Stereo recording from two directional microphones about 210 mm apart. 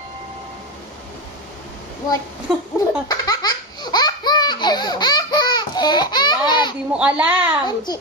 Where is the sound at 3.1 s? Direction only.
20° left (ahead or behind).